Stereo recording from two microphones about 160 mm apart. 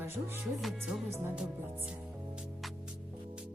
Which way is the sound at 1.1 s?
15° right (ahead or behind).